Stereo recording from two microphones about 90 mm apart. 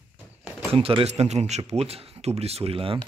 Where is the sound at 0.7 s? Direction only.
90° right.